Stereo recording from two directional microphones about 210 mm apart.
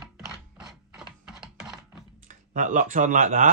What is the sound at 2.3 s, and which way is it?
Speech, 35° right (ahead or behind).